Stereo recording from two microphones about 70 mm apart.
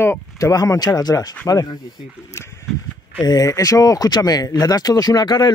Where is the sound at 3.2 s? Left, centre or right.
Left.